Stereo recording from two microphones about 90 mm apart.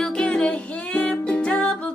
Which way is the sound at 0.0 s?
10° left (ahead or behind).